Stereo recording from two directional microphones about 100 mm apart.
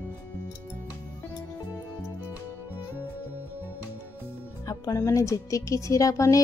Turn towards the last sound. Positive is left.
turn(degrees=35)  # may be behind; listen again after turning